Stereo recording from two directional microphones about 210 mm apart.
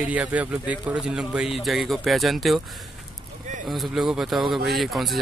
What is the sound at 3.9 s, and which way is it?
Speech, 5° right (ahead or behind).